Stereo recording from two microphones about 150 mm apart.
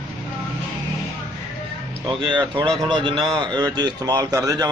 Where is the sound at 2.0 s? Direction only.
30° right (ahead or behind).